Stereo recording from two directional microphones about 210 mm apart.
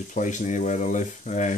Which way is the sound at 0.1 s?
35° left (ahead or behind).